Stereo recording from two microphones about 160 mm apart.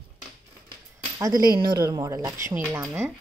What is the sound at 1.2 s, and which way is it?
Speech, 25° right (ahead or behind).